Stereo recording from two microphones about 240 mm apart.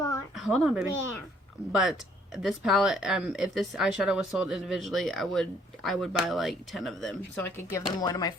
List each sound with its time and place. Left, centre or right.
0.3 s speech: centre